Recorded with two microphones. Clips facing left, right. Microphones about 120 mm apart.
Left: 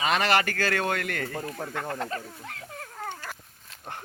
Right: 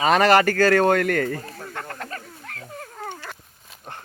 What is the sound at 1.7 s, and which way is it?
Speech, 20° left (ahead or behind).